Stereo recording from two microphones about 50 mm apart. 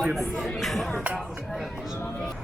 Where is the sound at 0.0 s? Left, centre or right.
Centre.